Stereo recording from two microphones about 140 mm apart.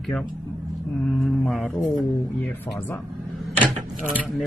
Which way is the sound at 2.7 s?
25° left (ahead or behind).